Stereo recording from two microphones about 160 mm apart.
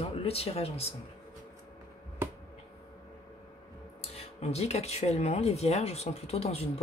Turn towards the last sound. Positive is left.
turn(degrees=40)  # may be behind; listen again after turning